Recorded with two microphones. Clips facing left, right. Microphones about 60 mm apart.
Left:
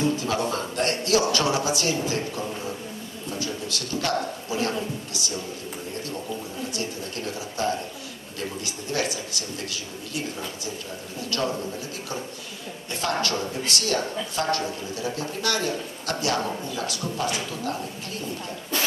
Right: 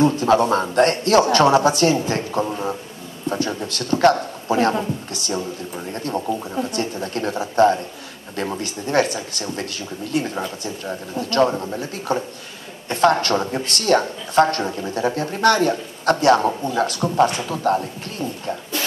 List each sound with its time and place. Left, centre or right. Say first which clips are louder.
0.0 s speech: right 9 dB; right